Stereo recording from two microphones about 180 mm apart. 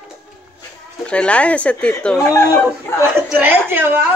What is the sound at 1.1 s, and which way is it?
A woman's voice, 5° left (ahead or behind).